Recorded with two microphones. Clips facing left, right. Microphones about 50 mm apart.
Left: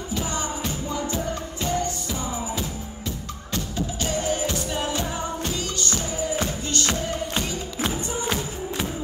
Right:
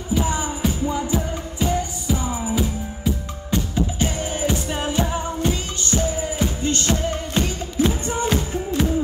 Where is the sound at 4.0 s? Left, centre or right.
Right.